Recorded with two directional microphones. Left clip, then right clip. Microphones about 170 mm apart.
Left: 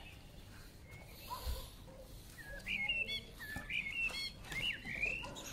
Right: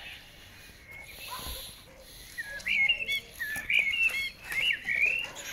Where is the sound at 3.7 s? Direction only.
65° left (ahead or behind).